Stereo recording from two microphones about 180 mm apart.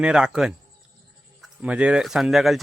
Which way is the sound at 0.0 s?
5° right (ahead or behind).